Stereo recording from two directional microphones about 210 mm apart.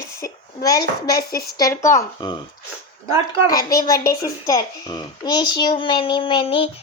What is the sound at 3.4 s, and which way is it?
A woman's voice, 15° left (ahead or behind).